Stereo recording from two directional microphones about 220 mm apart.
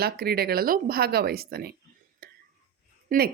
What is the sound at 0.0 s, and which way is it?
Speech, 45° right (ahead or behind).